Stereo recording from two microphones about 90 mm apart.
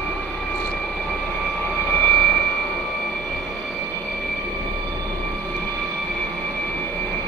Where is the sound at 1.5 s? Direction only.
20° left (ahead or behind).